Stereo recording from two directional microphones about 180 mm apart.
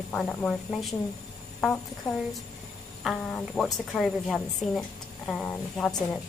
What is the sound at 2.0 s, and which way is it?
A woman's voice, centre (ahead or behind).